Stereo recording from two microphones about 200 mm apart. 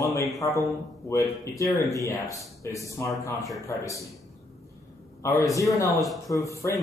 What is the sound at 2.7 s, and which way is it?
Speech, 15° left (ahead or behind).